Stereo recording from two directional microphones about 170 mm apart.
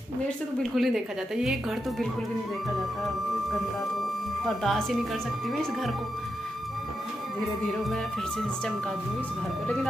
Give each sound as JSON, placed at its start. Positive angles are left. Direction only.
{"t": 0.6, "sound": "a woman's voice", "side_deg": 0}
{"t": 4.6, "sound": "a woman's voice", "side_deg": 0}
{"t": 7.6, "sound": "a woman's voice", "side_deg": 0}